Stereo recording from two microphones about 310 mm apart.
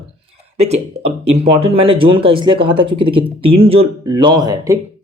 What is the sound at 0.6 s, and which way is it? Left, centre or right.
Speech, centre.